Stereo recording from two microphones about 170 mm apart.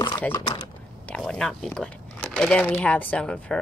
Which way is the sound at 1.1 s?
5° left (ahead or behind).